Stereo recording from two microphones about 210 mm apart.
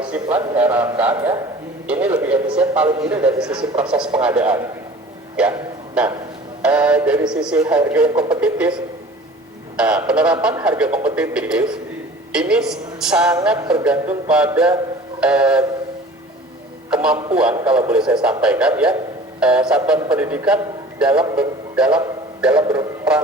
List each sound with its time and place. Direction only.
0.0 s a man's voice: 5° right (ahead or behind)
16.9 s a man's voice: 5° right (ahead or behind)
22.6 s speech: 20° right (ahead or behind)